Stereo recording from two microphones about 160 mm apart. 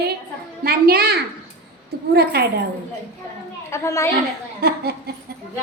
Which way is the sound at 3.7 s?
20° left (ahead or behind).